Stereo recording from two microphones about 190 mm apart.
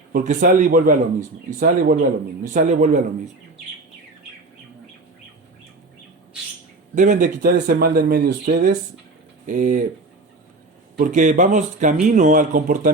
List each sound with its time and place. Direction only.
0.1 s speech: 50° right (ahead or behind)
6.9 s speech: 40° right (ahead or behind)
7.5 s speech: 50° right (ahead or behind)
10.9 s speech: 45° right (ahead or behind)